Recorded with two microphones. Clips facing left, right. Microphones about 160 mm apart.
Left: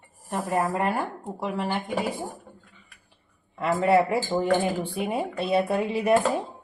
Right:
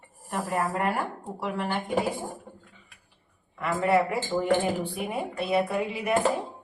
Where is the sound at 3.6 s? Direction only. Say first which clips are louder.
Left 3 dB; 30° left (ahead or behind).